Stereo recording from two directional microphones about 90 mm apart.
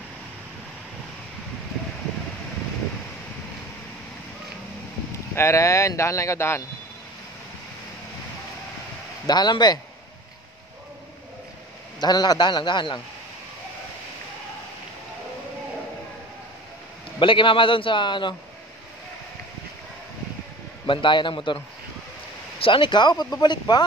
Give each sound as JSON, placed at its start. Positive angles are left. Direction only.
{"t": 5.3, "sound": "speech", "side_deg": 30}
{"t": 9.2, "sound": "speech", "side_deg": 50}
{"t": 12.0, "sound": "speech", "side_deg": 50}
{"t": 17.2, "sound": "a man's voice", "side_deg": 70}
{"t": 20.8, "sound": "speech", "side_deg": 65}
{"t": 22.6, "sound": "speech", "side_deg": 70}